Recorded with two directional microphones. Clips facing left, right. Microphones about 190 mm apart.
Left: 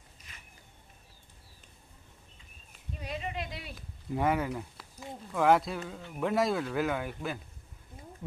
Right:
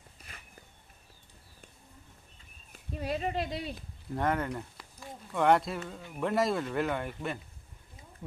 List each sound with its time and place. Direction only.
2.9 s speech: 50° right (ahead or behind); by 3.8 s 25° right (ahead or behind)
4.1 s speech: 5° left (ahead or behind)